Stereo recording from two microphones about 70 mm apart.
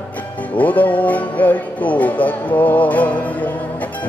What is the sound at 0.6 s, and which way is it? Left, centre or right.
Music, left.